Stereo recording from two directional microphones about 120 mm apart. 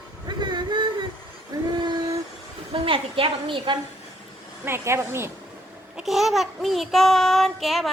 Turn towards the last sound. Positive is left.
turn(degrees=0)  # may be behind; listen again after turning